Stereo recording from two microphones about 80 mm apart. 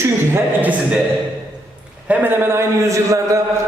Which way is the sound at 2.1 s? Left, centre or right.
Right.